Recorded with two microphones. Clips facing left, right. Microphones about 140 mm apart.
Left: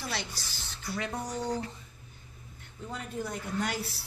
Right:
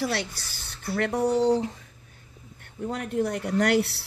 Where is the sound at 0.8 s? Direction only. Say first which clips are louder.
Right 11 dB; 65° right (ahead or behind).